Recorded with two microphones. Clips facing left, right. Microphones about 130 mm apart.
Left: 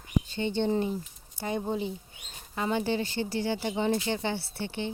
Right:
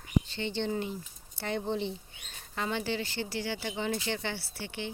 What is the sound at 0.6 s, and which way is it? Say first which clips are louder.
Speech: left 6 dB; 15° left (ahead or behind).